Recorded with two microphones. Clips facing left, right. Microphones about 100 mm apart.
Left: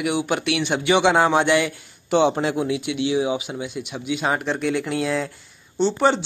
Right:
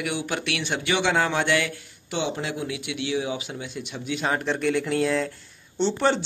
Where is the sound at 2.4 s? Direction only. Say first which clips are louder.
Left 8 dB; 30° left (ahead or behind).